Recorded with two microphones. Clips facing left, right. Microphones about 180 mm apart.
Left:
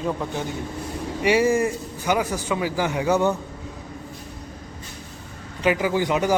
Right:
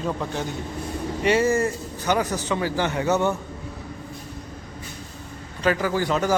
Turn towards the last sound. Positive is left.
turn(degrees=15)  # may be behind; listen again after turning